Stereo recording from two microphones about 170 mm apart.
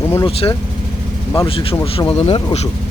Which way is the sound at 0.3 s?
35° left (ahead or behind).